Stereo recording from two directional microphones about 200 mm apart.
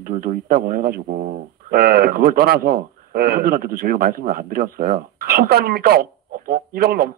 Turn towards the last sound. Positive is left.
turn(degrees=-50)  # may be behind; listen again after turning